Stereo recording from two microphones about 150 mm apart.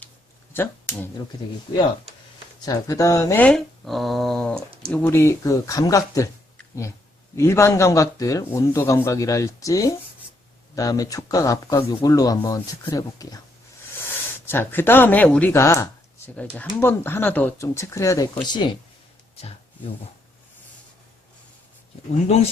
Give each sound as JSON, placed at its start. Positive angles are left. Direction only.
{"t": 0.5, "sound": "speech", "side_deg": 15}
{"t": 1.7, "sound": "speech", "side_deg": 30}
{"t": 3.4, "sound": "speech", "side_deg": 0}
{"t": 7.3, "sound": "speech", "side_deg": 20}